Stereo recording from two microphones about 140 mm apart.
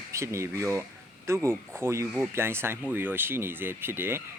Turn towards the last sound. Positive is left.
turn(degrees=-15)  # may be behind; listen again after turning